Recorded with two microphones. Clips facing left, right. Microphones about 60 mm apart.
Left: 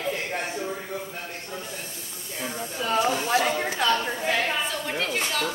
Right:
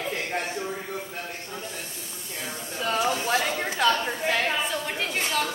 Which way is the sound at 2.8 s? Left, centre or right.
Centre.